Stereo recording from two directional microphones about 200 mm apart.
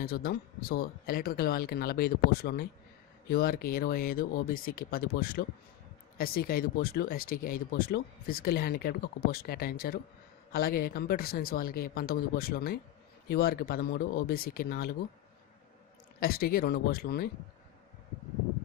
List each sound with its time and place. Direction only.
0.0 s speech: 50° left (ahead or behind)
16.2 s speech: 50° left (ahead or behind)